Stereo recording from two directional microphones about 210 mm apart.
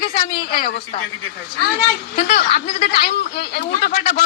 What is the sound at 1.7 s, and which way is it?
A woman's voice, 50° left (ahead or behind).